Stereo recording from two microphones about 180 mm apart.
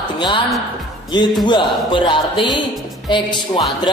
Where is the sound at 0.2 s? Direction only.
25° left (ahead or behind).